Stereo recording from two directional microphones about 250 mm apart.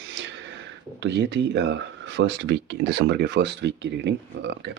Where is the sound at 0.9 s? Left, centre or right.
Right.